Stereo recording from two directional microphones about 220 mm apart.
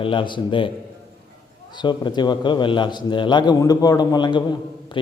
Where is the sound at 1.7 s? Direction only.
20° left (ahead or behind).